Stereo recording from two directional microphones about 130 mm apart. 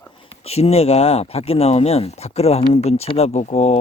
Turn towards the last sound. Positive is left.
turn(degrees=60)  # may be behind; listen again after turning